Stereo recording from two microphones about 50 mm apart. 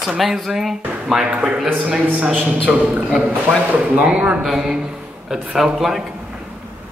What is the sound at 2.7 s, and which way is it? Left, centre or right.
A man's voice, right.